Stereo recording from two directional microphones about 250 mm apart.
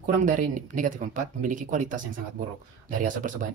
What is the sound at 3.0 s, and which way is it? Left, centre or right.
Speech, right.